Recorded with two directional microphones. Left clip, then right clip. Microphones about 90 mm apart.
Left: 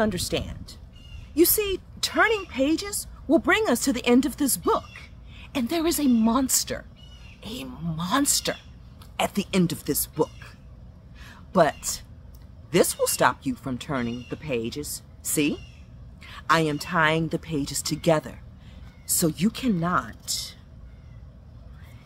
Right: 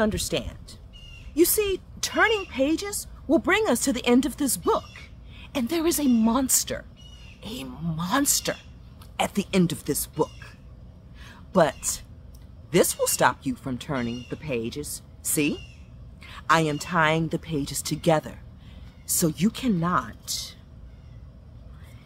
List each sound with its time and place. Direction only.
0.0 s speech: 10° right (ahead or behind)
7.4 s speech: 15° right (ahead or behind)
8.0 s speech: centre (ahead or behind)
11.2 s a sound: centre (ahead or behind)
12.7 s speech: centre (ahead or behind)